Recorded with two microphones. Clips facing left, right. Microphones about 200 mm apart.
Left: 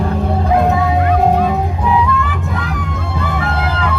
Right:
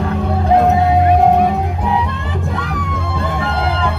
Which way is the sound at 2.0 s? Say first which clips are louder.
Left 5 dB; 30° right (ahead or behind).